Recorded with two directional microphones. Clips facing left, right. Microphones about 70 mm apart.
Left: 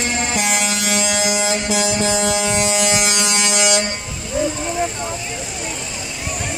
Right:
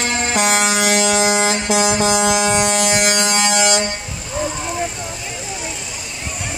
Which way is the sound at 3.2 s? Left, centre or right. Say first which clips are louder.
Right 3 dB; right.